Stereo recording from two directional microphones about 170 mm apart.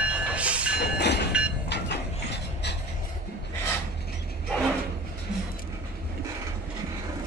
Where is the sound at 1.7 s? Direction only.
85° left.